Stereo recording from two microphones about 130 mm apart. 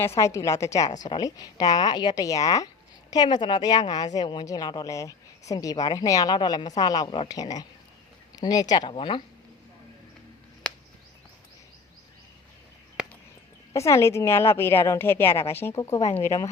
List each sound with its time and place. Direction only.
0.0 s a woman's voice: 20° left (ahead or behind); by 9.2 s 40° left (ahead or behind)
13.0 s a sound: 5° right (ahead or behind)
13.7 s a woman's voice: 25° left (ahead or behind)